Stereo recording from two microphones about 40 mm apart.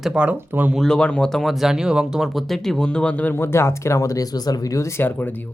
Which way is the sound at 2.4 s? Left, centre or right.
Centre.